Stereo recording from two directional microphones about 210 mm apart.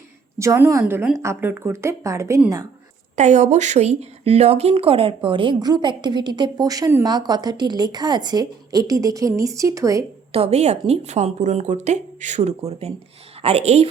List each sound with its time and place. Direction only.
0.3 s a woman's voice: 15° right (ahead or behind)
3.2 s a woman's voice: 35° right (ahead or behind); by 10.0 s 15° right (ahead or behind)
10.3 s speech: 30° right (ahead or behind)